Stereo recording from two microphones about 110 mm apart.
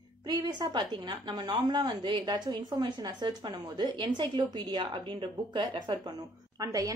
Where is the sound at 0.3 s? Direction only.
40° right (ahead or behind).